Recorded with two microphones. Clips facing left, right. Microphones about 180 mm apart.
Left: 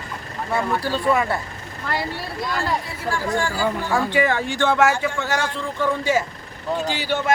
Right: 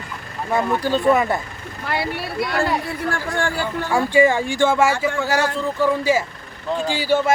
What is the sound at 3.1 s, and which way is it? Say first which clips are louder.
Speech: left 3 dB; 60° right (ahead or behind).